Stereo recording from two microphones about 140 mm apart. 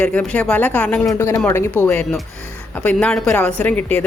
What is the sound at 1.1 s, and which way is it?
Speech, 20° left (ahead or behind).